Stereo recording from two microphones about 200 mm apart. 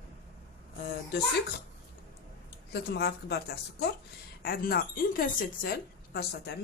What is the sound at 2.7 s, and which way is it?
Speech, 55° left (ahead or behind).